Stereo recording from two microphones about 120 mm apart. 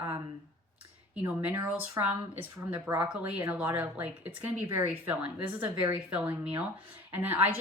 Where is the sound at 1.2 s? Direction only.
15° right (ahead or behind).